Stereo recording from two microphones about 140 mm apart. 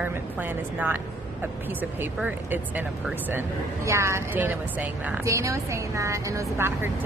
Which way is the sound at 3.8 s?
20° right (ahead or behind).